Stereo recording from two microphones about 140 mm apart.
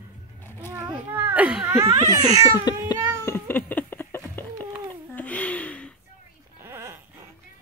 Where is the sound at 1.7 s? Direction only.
20° right (ahead or behind).